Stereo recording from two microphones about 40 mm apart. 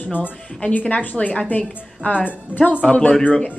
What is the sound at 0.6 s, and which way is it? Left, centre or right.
A woman's voice, left.